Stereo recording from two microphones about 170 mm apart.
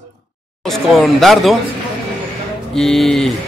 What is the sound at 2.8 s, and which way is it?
Speech, 5° left (ahead or behind).